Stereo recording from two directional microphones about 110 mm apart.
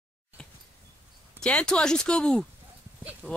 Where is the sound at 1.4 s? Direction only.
10° left (ahead or behind).